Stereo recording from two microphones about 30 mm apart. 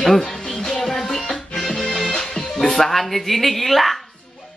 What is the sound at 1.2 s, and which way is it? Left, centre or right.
Music, left.